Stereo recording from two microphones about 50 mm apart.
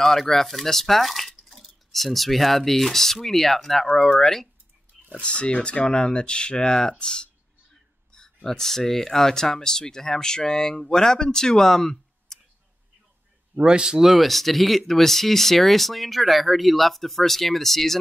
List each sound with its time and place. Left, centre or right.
0.0 s speech: centre
5.2 s speech: left
8.5 s speech: centre
13.6 s a man's voice: centre
14.1 s speech: centre